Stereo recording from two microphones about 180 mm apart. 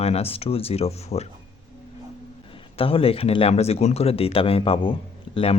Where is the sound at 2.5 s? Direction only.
30° left (ahead or behind).